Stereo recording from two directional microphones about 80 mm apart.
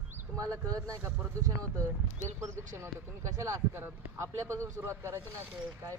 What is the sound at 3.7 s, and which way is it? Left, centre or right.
Speech, right.